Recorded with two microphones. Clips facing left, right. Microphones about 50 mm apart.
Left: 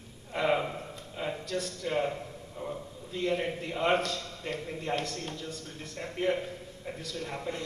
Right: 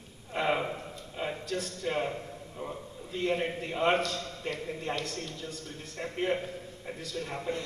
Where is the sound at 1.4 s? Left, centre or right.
Right.